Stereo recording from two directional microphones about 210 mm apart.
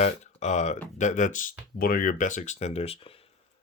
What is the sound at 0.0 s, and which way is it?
Speech, 35° left (ahead or behind).